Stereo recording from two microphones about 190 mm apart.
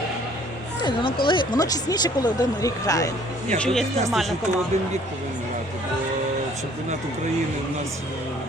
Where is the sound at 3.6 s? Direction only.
Centre (ahead or behind).